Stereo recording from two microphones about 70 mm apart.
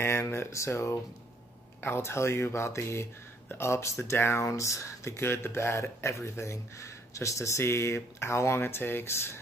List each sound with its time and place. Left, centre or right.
0.0 s speech: left